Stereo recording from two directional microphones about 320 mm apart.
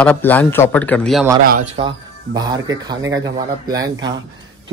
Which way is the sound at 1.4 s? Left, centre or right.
Right.